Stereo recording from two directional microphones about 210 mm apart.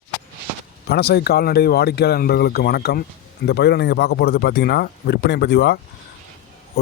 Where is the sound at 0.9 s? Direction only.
50° left (ahead or behind).